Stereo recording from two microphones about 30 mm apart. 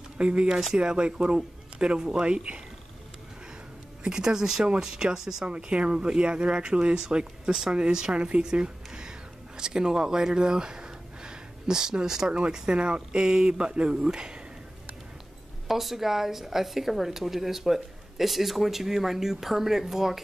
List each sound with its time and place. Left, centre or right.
0.2 s speech: right
4.2 s a woman's voice: centre
5.4 s speech: right
8.1 s speech: right
8.5 s speech: right
15.7 s a woman's voice: centre